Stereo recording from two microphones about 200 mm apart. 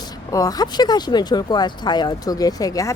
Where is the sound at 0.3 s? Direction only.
15° left (ahead or behind).